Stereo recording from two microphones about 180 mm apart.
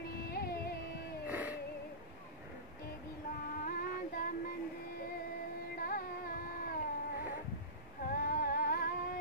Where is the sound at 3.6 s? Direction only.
50° left (ahead or behind).